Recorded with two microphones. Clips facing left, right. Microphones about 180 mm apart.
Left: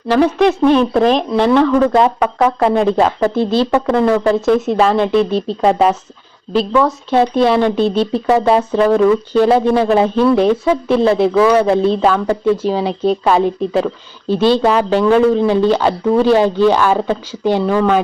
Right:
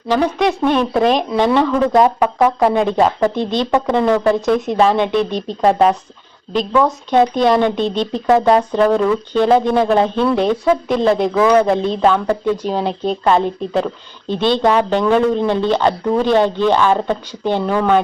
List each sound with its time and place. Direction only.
0.2 s speech: 5° right (ahead or behind)
5.1 s speech: 35° left (ahead or behind)
5.6 s speech: centre (ahead or behind)